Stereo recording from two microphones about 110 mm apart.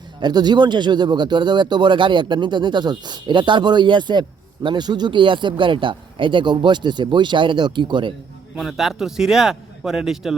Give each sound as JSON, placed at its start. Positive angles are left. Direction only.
{"t": 0.2, "sound": "speech", "side_deg": -40}
{"t": 8.5, "sound": "speech", "side_deg": 0}